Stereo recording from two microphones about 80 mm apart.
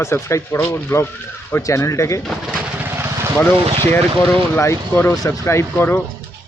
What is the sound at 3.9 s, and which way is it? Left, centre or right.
Speech, left.